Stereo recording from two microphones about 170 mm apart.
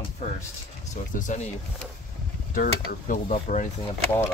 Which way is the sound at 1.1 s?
45° left (ahead or behind).